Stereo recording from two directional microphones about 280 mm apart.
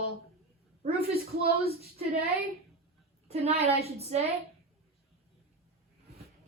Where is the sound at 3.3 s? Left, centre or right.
Right.